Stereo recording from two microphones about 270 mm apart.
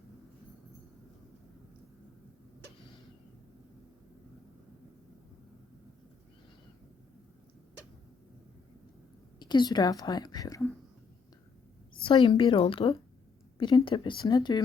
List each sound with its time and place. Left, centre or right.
9.4 s a woman's voice: centre
12.0 s a woman's voice: centre